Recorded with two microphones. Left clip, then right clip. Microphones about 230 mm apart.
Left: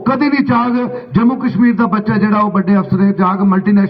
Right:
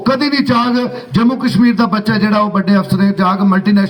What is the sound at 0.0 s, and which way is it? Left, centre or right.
A man's voice, right.